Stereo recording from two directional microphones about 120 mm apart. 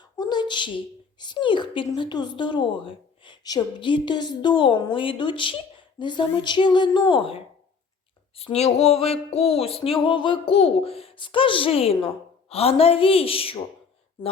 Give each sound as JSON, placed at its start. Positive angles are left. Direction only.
{"t": 0.2, "sound": "a woman's voice", "side_deg": 35}
{"t": 8.4, "sound": "a sound", "side_deg": 60}
{"t": 9.3, "sound": "speech", "side_deg": 60}